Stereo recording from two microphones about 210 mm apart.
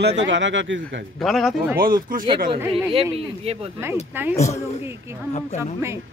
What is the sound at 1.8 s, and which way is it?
Speech, 40° right (ahead or behind).